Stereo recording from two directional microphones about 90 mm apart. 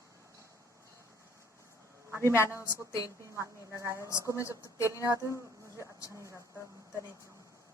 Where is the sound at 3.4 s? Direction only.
35° right (ahead or behind).